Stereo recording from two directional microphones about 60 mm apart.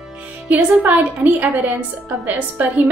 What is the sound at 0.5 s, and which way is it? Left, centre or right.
A woman's voice, right.